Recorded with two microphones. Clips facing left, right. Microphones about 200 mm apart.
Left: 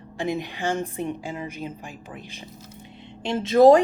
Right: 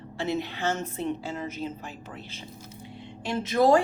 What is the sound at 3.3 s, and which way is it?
Speech, 25° left (ahead or behind).